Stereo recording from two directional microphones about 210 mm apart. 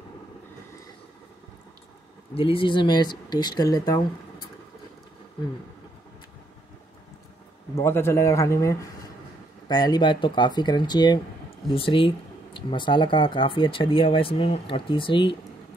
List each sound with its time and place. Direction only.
2.3 s speech: 25° left (ahead or behind)
7.7 s speech: 10° left (ahead or behind)